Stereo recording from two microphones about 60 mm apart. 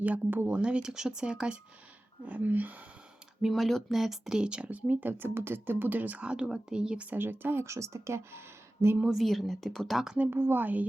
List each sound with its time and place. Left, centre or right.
0.0 s speech: right
0.5 s speech: centre
2.2 s speech: right
3.4 s speech: centre
4.0 s speech: centre
7.1 s speech: right
9.0 s speech: centre
10.2 s speech: right